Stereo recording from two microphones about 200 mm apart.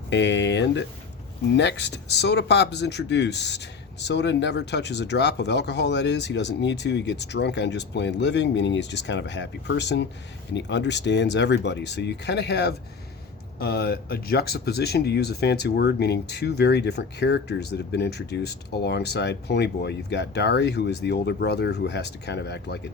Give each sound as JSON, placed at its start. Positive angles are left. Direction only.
{"t": 0.1, "sound": "speech", "side_deg": 60}